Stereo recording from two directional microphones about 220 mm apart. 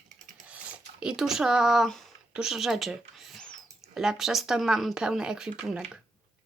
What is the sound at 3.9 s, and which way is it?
A child's voice, centre (ahead or behind).